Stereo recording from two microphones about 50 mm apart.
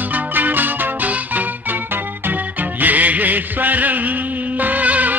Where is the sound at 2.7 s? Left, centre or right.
Right.